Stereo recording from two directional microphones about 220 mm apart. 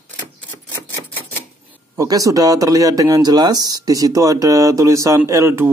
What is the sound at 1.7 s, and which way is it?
Speech, 15° right (ahead or behind).